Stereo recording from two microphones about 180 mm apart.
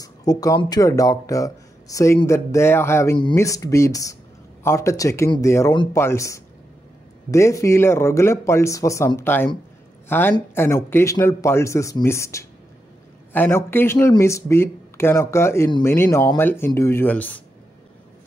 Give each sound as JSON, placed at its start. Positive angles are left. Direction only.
{"t": 0.0, "sound": "speech", "side_deg": 20}